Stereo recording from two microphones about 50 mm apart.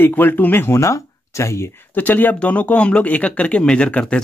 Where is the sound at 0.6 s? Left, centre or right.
Left.